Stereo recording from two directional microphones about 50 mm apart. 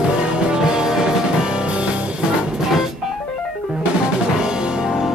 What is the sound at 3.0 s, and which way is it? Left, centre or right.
Music, centre.